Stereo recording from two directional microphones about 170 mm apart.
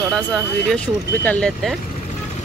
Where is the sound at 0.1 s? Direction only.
5° left (ahead or behind).